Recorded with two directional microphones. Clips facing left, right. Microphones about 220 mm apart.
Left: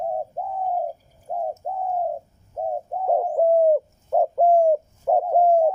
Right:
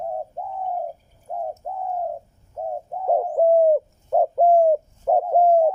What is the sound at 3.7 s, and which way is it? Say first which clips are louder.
Bird: right 1 dB; 5° right (ahead or behind).